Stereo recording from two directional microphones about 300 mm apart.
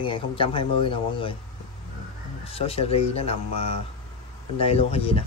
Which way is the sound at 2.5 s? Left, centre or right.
Centre.